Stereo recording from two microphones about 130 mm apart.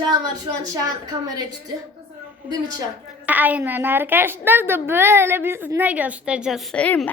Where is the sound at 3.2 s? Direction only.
10° right (ahead or behind).